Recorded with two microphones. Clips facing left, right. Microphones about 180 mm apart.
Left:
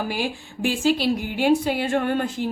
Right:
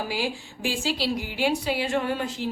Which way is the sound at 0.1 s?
55° left (ahead or behind).